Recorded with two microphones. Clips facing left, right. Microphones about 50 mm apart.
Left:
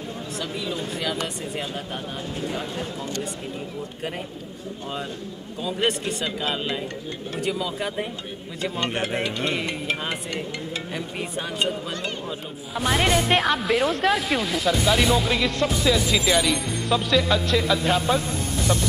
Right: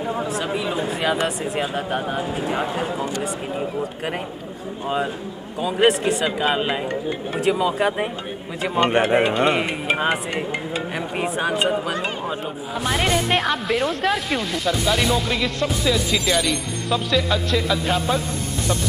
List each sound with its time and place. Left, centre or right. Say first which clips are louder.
0.4 s speech: right 6 dB; right
1.1 s speech: right 6 dB; centre
4.8 s speech: right 9 dB; centre
6.2 s speech: right 4 dB; right
12.7 s speech: even; centre
18.7 s music: even; centre